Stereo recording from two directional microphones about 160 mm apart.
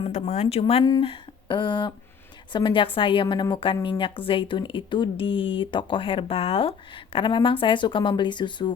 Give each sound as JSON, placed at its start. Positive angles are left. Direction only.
{"t": 0.1, "sound": "speech", "side_deg": 45}
{"t": 0.9, "sound": "a sound", "side_deg": 30}
{"t": 2.5, "sound": "speech", "side_deg": 30}